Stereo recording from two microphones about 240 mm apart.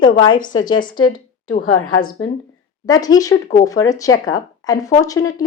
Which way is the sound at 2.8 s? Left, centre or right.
Centre.